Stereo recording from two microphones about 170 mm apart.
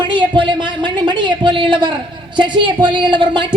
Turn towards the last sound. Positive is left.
turn(degrees=-30)  # may be behind; listen again after turning